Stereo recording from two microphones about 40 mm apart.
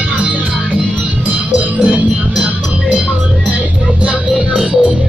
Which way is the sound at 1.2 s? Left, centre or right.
Right.